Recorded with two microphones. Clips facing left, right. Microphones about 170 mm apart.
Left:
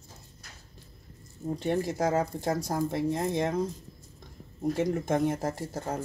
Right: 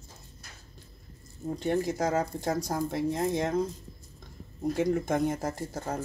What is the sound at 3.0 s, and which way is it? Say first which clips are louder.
Speech: even; 20° left (ahead or behind).